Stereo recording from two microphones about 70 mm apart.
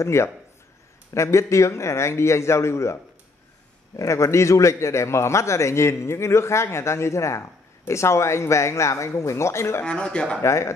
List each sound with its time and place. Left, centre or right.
0.0 s a man's voice: left
9.8 s speech: centre
10.4 s a man's voice: left